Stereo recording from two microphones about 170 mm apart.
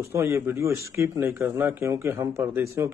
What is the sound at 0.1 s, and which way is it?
Speech, 15° right (ahead or behind).